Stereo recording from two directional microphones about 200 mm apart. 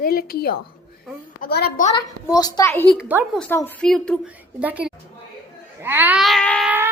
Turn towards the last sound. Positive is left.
turn(degrees=-10)  # may be behind; listen again after turning